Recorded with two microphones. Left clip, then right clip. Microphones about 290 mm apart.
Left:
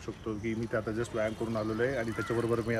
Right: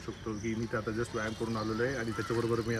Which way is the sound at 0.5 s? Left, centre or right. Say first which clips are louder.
Left 2 dB; centre.